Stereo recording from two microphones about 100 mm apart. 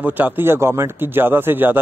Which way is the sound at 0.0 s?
20° right (ahead or behind).